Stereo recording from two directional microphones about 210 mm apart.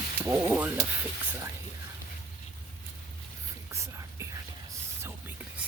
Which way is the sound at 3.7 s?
15° right (ahead or behind).